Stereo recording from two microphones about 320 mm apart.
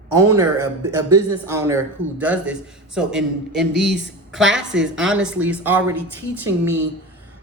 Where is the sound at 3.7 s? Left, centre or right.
Right.